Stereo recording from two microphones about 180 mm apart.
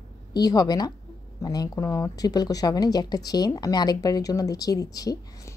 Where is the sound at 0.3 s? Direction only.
20° left (ahead or behind).